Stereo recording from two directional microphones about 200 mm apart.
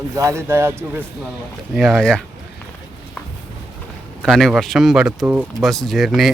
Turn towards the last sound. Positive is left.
turn(degrees=0)  # may be behind; listen again after turning